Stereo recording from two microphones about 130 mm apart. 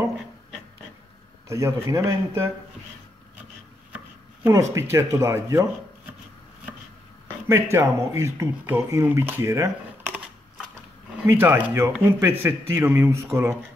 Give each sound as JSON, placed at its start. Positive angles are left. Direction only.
{"t": 1.5, "sound": "speech", "side_deg": -25}
{"t": 3.9, "sound": "speech", "side_deg": -20}
{"t": 7.4, "sound": "speech", "side_deg": -20}
{"t": 11.2, "sound": "speech", "side_deg": -15}